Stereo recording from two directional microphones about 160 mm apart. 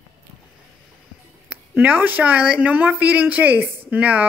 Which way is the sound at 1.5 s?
10° right (ahead or behind).